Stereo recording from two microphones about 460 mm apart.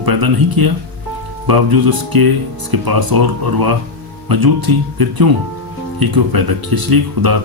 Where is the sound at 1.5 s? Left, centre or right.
Right.